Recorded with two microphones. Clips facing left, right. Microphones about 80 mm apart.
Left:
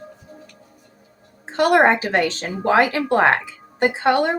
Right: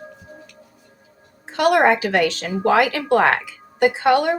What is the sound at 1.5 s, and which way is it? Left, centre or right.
Speech, left.